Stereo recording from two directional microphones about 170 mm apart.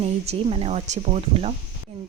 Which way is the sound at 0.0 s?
35° right (ahead or behind).